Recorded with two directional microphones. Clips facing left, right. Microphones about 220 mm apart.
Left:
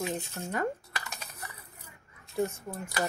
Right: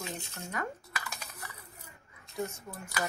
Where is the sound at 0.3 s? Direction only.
30° left (ahead or behind).